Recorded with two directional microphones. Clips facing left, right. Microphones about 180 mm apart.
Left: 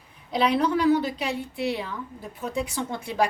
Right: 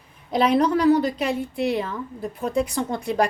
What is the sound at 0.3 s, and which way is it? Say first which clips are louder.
A woman's voice: right 4 dB; 45° right (ahead or behind).